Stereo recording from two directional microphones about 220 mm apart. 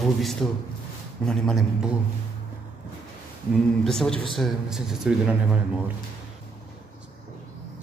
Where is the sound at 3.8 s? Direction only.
Centre (ahead or behind).